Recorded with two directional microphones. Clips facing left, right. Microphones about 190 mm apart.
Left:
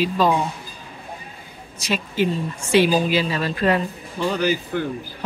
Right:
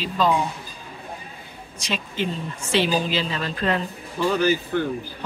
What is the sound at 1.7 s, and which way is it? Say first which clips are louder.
A woman's voice: left 5 dB; 5° left (ahead or behind).